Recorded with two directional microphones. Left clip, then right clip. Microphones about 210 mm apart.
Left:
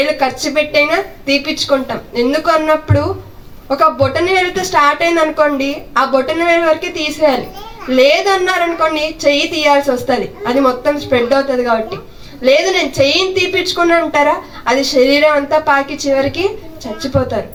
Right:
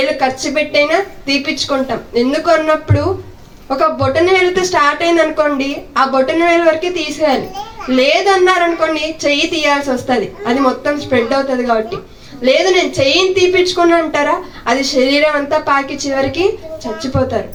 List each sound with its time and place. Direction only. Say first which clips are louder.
0.2 s a woman's voice: left 1 dB; 20° left (ahead or behind)